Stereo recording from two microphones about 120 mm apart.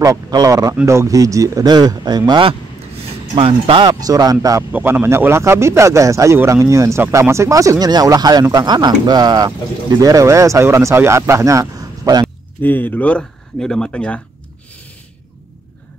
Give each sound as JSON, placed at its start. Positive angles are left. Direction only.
{"t": 0.0, "sound": "speech", "side_deg": -30}
{"t": 3.0, "sound": "a sound", "side_deg": -55}
{"t": 4.0, "sound": "speech", "side_deg": -30}
{"t": 4.7, "sound": "speech", "side_deg": -20}
{"t": 12.6, "sound": "speech", "side_deg": 15}